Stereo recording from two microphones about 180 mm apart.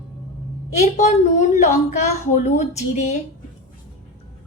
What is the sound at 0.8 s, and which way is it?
A woman's voice, 40° left (ahead or behind).